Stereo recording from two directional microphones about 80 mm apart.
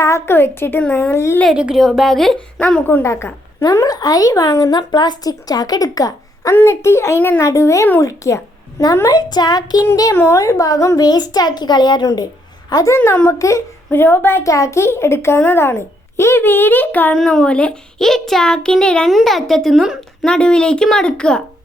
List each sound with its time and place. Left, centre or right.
0.0 s a woman's voice: left
1.5 s speech: centre
1.8 s speech: centre
2.6 s a child's voice: centre
3.0 s a child's voice: left
3.6 s a woman's voice: left
6.5 s a child's voice: left
9.0 s a child's voice: left
9.9 s a woman's voice: left
10.9 s a child's voice: left
13.1 s a child's voice: left
13.9 s a woman's voice: left
17.2 s a child's voice: centre
20.2 s a child's voice: centre